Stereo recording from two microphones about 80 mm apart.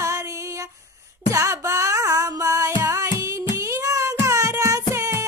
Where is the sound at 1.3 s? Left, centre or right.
Right.